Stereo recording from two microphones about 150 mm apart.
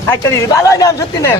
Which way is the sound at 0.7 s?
20° left (ahead or behind).